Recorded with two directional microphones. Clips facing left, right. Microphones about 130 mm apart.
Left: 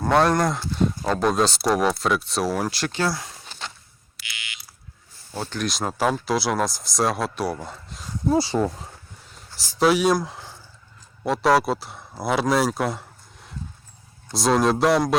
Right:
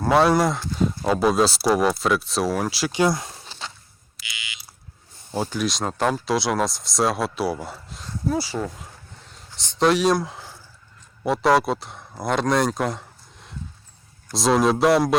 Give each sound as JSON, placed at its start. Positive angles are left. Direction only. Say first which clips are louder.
{"t": 0.0, "sound": "speech", "louder": "right 1 dB", "side_deg": 0}
{"t": 2.9, "sound": "a sound", "louder": "right 4 dB", "side_deg": -20}
{"t": 5.3, "sound": "speech", "louder": "right 5 dB", "side_deg": -20}
{"t": 5.5, "sound": "speech", "louder": "left 2 dB", "side_deg": 0}
{"t": 8.4, "sound": "speech", "louder": "left 5 dB", "side_deg": 35}
{"t": 9.3, "sound": "speech", "louder": "left 3 dB", "side_deg": 5}